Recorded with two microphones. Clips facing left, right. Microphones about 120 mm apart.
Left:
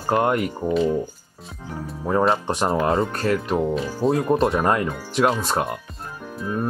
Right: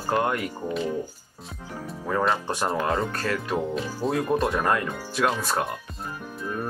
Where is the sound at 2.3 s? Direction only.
25° left (ahead or behind).